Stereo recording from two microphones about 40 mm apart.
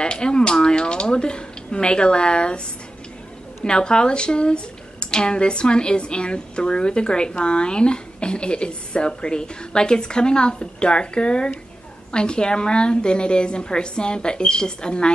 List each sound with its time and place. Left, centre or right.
0.0 s speech: left
3.6 s speech: left